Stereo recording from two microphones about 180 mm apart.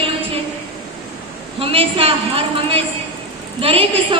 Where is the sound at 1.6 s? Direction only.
30° right (ahead or behind).